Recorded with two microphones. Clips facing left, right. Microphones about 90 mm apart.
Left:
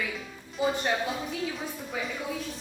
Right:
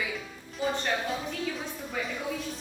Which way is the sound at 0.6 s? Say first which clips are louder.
Left 2 dB; 5° left (ahead or behind).